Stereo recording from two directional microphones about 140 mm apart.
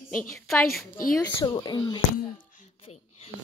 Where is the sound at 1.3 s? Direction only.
30° left (ahead or behind).